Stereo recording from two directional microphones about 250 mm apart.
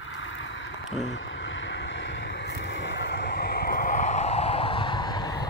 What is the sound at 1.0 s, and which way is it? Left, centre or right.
Vehicle, left.